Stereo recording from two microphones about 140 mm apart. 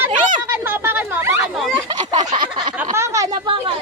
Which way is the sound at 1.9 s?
30° right (ahead or behind).